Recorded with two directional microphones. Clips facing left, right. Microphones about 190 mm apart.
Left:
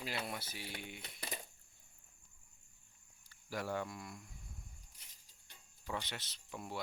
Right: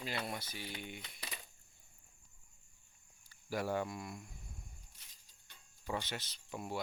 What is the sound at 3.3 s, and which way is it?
Cricket, 10° right (ahead or behind).